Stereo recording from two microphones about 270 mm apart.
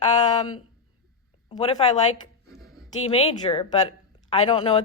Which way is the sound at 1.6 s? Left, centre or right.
Left.